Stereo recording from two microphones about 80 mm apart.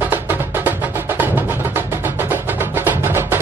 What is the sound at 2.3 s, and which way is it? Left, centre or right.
Music, right.